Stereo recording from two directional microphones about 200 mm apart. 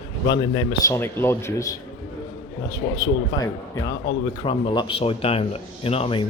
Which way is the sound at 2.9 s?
20° left (ahead or behind).